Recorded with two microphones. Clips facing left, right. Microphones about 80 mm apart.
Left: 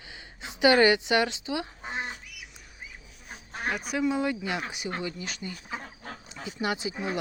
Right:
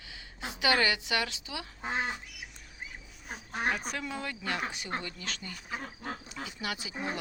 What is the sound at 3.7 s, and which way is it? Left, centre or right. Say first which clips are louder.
A woman's voice: left 9 dB; centre.